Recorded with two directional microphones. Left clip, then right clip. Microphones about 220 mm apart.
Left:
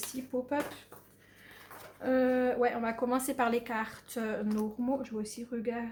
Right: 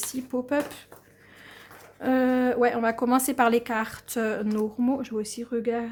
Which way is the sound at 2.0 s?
50° right (ahead or behind).